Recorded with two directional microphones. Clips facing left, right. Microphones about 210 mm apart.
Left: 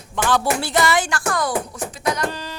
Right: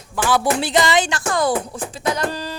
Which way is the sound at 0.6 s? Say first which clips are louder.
Right 2 dB; 15° right (ahead or behind).